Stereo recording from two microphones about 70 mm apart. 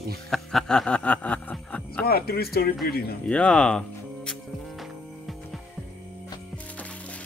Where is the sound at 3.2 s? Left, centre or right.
Centre.